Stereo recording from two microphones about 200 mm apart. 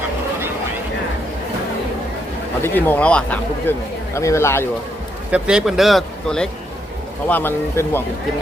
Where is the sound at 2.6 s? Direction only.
10° left (ahead or behind).